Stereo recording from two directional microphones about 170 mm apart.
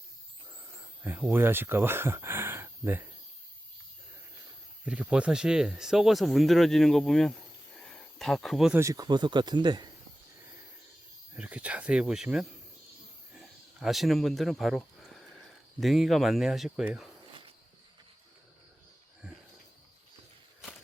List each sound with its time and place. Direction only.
1.0 s speech: 10° right (ahead or behind)
4.9 s speech: 5° right (ahead or behind)
8.8 s speech: 20° right (ahead or behind)
11.3 s speech: 10° right (ahead or behind)
13.3 s a sound: 5° right (ahead or behind)
15.8 s speech: centre (ahead or behind)